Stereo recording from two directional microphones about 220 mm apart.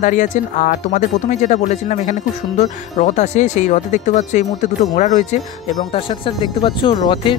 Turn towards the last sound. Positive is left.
turn(degrees=20)  # may be behind; listen again after turning